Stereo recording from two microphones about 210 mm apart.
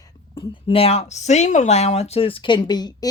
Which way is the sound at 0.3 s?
25° left (ahead or behind).